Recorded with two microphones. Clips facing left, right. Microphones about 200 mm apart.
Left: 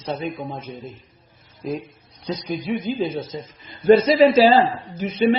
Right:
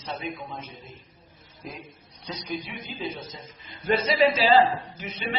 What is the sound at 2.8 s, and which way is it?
Speech, 40° left (ahead or behind).